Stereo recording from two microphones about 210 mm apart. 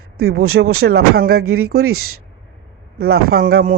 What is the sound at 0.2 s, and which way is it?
Speech, 45° right (ahead or behind).